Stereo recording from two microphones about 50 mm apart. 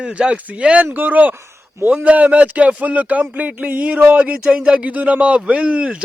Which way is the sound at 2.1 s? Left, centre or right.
Right.